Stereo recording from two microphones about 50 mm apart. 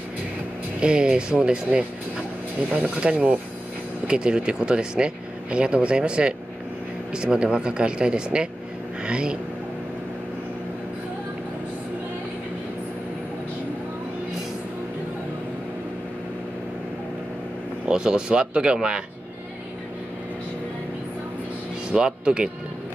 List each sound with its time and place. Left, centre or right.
0.7 s speech: centre
3.0 s speech: right
17.8 s speech: centre
21.9 s speech: right